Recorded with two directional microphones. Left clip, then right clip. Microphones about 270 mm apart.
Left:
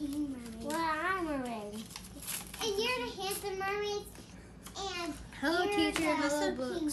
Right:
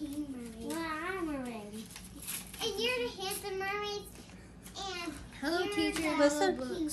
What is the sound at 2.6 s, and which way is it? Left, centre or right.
Child singing, left.